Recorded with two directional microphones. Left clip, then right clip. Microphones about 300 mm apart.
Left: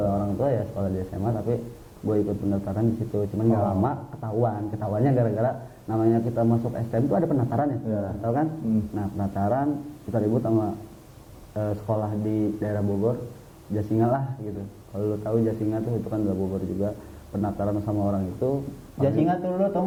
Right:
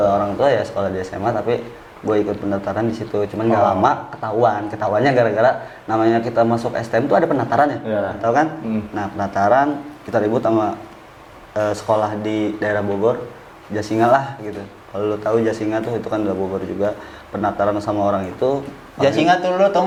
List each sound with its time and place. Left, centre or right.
0.0 s speech: centre
18.9 s speech: centre